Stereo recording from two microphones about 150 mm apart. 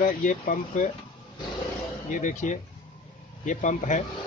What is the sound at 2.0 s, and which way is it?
Speech, 55° left (ahead or behind).